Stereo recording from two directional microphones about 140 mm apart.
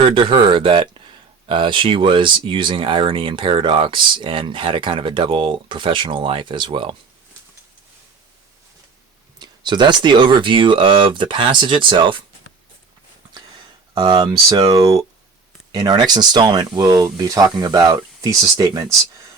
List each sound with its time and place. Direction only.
0.1 s speech: 35° right (ahead or behind)
9.4 s speech: 30° right (ahead or behind)
13.9 s speech: 30° right (ahead or behind)